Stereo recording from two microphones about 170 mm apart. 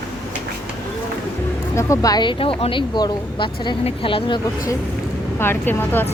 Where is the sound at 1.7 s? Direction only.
20° left (ahead or behind).